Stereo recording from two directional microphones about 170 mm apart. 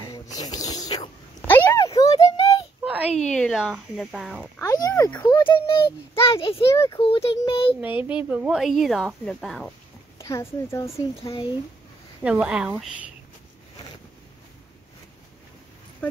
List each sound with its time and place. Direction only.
0.1 s music: 20° left (ahead or behind)
1.5 s a sound: 15° left (ahead or behind)
2.8 s a sound: 10° right (ahead or behind)
3.3 s a woman's voice: 5° left (ahead or behind)
4.6 s speech: 20° left (ahead or behind)
5.5 s speech: 30° left (ahead or behind)
6.7 s speech: 15° left (ahead or behind)
7.0 s speech: 35° left (ahead or behind)
7.8 s a woman's voice: 10° right (ahead or behind)
10.1 s speech: 15° left (ahead or behind)
12.2 s a woman's voice: 5° right (ahead or behind)